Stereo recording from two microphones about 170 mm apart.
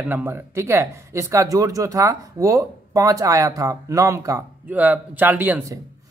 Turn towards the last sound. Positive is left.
turn(degrees=-10)  # may be behind; listen again after turning